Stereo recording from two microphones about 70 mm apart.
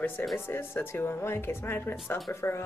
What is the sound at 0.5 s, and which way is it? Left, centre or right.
A woman's voice, left.